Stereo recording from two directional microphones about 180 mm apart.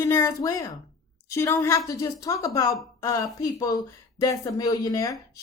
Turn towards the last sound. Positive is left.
turn(degrees=20)  # may be behind; listen again after turning